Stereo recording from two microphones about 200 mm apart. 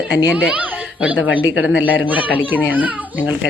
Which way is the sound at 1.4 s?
80° left.